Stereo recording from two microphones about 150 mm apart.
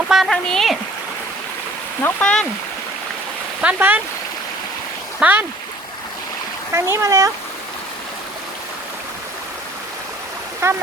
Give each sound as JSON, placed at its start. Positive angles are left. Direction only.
{"t": 0.1, "sound": "speech", "side_deg": 0}
{"t": 2.0, "sound": "speech", "side_deg": 15}
{"t": 3.6, "sound": "speech", "side_deg": -10}
{"t": 5.2, "sound": "speech", "side_deg": -10}
{"t": 6.7, "sound": "speech", "side_deg": -20}
{"t": 10.6, "sound": "speech", "side_deg": -20}